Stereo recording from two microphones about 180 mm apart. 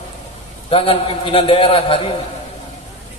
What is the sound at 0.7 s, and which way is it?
A man's voice, 30° left (ahead or behind).